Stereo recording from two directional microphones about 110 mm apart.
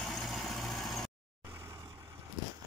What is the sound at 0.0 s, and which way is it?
Vehicle, 5° left (ahead or behind).